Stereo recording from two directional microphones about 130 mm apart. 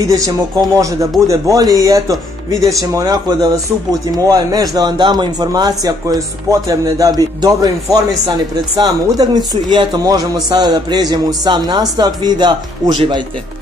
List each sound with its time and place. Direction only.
0.0 s speech: 25° right (ahead or behind)